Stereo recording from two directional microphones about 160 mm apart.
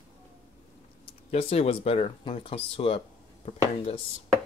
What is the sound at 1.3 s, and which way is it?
Speech, 40° left (ahead or behind).